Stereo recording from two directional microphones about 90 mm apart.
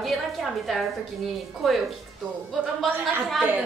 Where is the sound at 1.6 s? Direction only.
Centre (ahead or behind).